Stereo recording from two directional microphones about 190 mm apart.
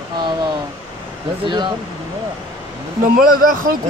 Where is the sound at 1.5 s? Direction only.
25° right (ahead or behind).